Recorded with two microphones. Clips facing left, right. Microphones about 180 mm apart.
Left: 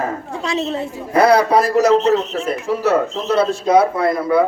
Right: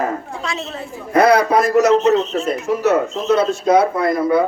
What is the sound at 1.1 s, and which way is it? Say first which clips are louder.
A man's voice: even; 30° left (ahead or behind).